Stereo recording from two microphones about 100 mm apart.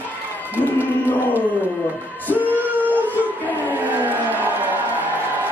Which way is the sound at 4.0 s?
20° right (ahead or behind).